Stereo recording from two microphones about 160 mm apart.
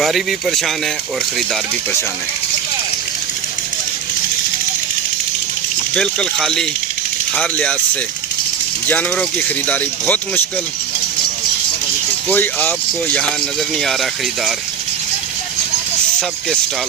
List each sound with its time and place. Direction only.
0.0 s speech: centre (ahead or behind)
5.9 s speech: 5° left (ahead or behind)
8.9 s speech: 10° left (ahead or behind)
12.3 s speech: 10° left (ahead or behind)